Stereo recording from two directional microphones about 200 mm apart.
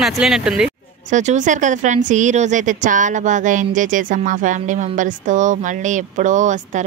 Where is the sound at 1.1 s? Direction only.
35° right (ahead or behind).